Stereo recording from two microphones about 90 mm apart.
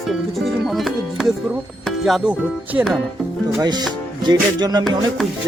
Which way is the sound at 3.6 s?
50° right (ahead or behind).